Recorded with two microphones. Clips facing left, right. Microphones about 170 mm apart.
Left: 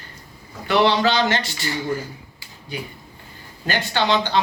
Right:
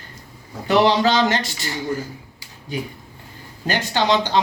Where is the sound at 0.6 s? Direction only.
40° right (ahead or behind).